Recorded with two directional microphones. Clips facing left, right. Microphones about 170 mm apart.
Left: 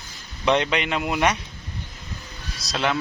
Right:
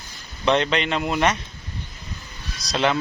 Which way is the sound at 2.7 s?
Centre (ahead or behind).